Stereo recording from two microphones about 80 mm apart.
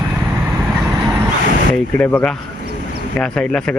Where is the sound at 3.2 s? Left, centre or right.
Centre.